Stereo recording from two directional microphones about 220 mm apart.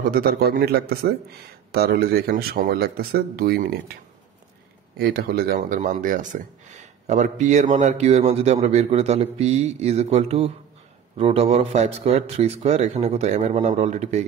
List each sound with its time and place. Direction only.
0.1 s a man's voice: 45° right (ahead or behind)